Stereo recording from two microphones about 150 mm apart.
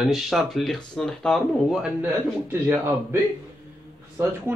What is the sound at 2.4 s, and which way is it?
Speech, 15° right (ahead or behind).